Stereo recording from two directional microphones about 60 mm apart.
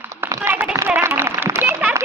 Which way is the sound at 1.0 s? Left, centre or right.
Right.